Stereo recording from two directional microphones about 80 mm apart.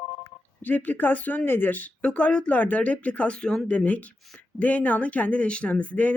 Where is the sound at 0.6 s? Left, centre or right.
Left.